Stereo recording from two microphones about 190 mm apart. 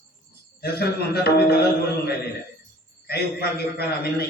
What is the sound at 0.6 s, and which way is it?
A man's voice, 55° left (ahead or behind).